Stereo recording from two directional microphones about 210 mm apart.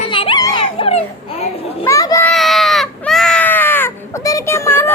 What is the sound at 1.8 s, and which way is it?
Speech, 15° left (ahead or behind).